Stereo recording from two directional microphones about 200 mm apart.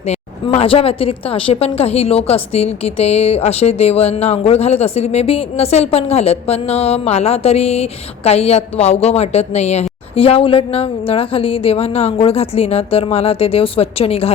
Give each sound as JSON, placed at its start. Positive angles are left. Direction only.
{"t": 0.0, "sound": "a woman's voice", "side_deg": 30}